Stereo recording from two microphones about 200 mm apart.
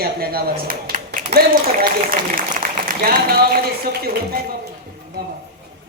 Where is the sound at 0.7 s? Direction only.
45° right (ahead or behind).